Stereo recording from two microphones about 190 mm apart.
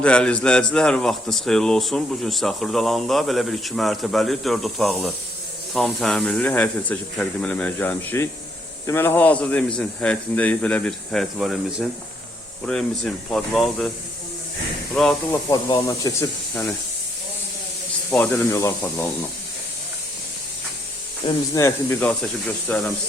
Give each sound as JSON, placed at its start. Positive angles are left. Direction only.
{"t": 0.0, "sound": "speech", "side_deg": 5}
{"t": 13.3, "sound": "speech", "side_deg": 0}
{"t": 14.9, "sound": "speech", "side_deg": 0}
{"t": 15.4, "sound": "speech", "side_deg": 20}
{"t": 18.1, "sound": "speech", "side_deg": 10}
{"t": 21.2, "sound": "speech", "side_deg": 15}